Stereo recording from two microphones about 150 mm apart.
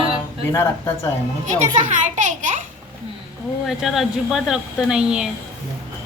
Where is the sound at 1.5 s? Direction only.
55° right (ahead or behind).